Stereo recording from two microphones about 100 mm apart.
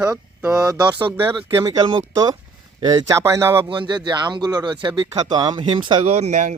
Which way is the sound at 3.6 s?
55° right (ahead or behind).